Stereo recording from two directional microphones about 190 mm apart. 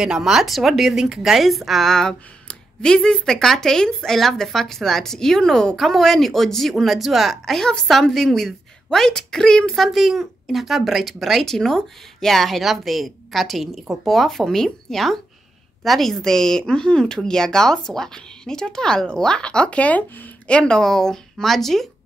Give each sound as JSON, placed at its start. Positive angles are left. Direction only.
{"t": 0.0, "sound": "a woman's voice", "side_deg": -5}